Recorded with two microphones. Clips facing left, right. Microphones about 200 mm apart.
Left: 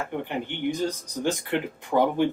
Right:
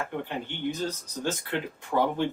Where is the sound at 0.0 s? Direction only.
15° left (ahead or behind).